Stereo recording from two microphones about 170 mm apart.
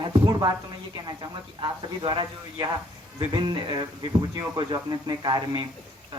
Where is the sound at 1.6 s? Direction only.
30° right (ahead or behind).